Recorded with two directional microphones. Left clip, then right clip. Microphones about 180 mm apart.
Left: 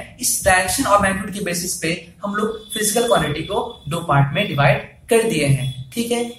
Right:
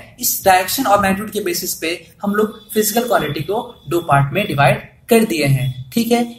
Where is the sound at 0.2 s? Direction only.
40° right (ahead or behind).